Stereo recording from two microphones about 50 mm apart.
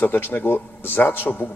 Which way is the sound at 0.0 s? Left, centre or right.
Left.